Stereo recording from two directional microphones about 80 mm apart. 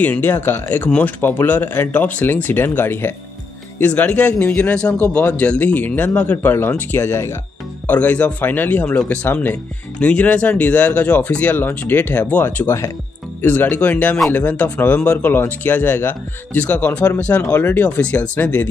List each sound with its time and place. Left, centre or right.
0.0 s speech: left
7.8 s speech: left